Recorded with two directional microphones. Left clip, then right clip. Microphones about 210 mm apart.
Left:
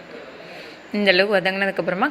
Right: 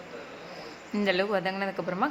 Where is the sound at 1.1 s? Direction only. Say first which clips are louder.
Left 10 dB; 10° left (ahead or behind).